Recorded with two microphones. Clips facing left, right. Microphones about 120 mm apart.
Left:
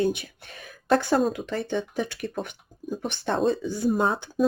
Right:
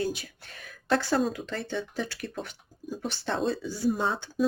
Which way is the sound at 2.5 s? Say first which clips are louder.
Left 5 dB; 50° left (ahead or behind).